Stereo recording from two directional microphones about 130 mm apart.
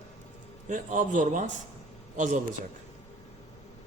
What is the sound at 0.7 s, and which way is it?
A man's voice, 75° right (ahead or behind).